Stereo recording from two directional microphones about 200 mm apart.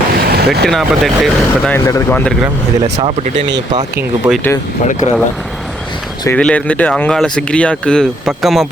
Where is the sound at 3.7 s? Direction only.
20° right (ahead or behind).